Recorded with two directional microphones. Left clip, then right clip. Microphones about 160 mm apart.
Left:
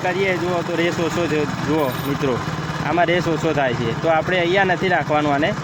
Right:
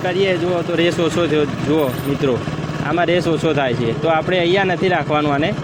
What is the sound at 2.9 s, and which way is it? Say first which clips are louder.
Speech: right 1 dB; 5° right (ahead or behind).